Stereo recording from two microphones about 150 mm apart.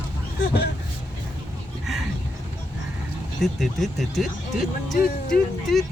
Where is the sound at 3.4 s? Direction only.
Centre (ahead or behind).